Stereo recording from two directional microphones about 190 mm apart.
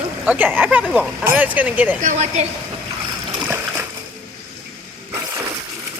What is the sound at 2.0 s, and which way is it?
Speech, 35° right (ahead or behind).